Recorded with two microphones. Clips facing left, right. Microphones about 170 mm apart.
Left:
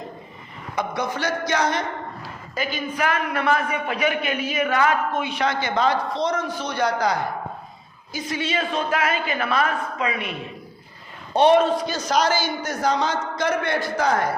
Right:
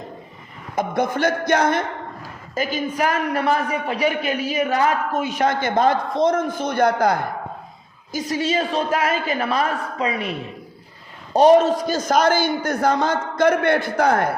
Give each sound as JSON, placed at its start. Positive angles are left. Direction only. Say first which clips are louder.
{"t": 0.8, "sound": "a man's voice", "louder": "right 5 dB", "side_deg": -50}
{"t": 2.2, "sound": "a man's voice", "louder": "right 5 dB", "side_deg": -40}
{"t": 8.1, "sound": "a woman's voice", "louder": "right 4 dB", "side_deg": -40}
{"t": 11.3, "sound": "a man's voice", "louder": "right 3 dB", "side_deg": -40}